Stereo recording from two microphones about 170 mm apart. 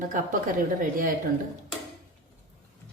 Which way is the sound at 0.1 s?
50° right (ahead or behind).